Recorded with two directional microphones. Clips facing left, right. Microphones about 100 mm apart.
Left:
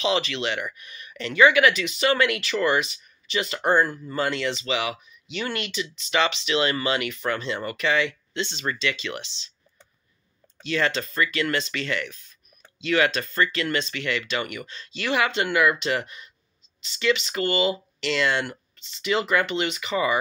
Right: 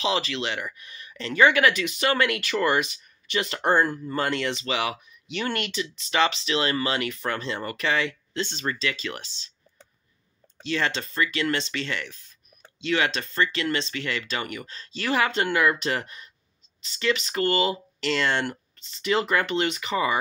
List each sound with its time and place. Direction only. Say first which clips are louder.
0.0 s speech: left 2 dB; 35° right (ahead or behind); by 5.7 s 50° right (ahead or behind)
5.7 s speech: left 1 dB; 40° right (ahead or behind)
10.6 s speech: left 2 dB; 30° right (ahead or behind)